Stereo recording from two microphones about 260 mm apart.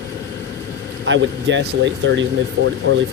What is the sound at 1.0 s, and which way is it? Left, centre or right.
Speech, right.